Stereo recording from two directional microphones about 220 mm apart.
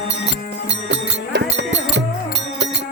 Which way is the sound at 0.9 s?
55° right (ahead or behind).